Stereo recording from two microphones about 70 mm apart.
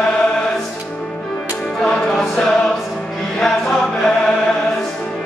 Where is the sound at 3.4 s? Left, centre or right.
Centre.